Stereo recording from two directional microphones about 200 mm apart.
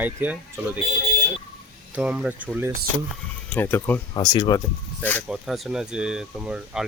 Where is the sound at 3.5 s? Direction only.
10° left (ahead or behind).